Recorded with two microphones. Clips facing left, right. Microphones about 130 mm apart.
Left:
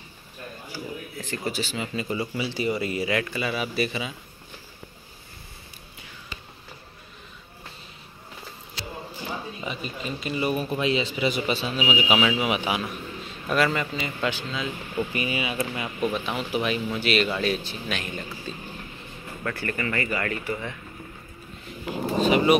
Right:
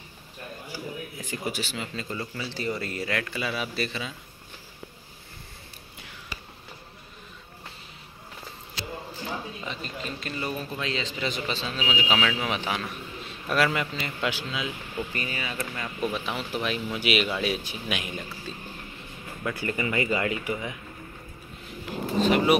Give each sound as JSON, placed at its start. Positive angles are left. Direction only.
{"t": 1.1, "sound": "speech", "side_deg": -10}
{"t": 2.0, "sound": "a man's voice", "side_deg": 10}
{"t": 9.6, "sound": "a man's voice", "side_deg": 10}
{"t": 13.5, "sound": "speech", "side_deg": 0}
{"t": 15.0, "sound": "a man's voice", "side_deg": 10}
{"t": 16.0, "sound": "speech", "side_deg": 0}
{"t": 19.6, "sound": "speech", "side_deg": -15}
{"t": 21.8, "sound": "speech", "side_deg": 0}